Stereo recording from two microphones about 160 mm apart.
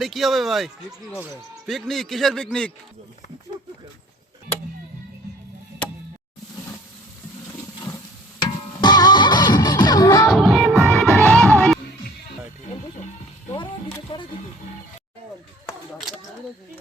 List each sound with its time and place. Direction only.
0.0 s a man's voice: centre (ahead or behind)
8.4 s music: 25° left (ahead or behind)
10.2 s music: centre (ahead or behind)
13.5 s speech: 30° left (ahead or behind)